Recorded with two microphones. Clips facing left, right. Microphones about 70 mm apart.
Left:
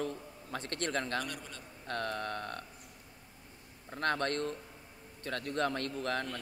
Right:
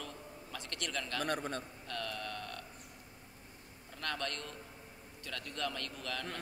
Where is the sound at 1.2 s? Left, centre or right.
Right.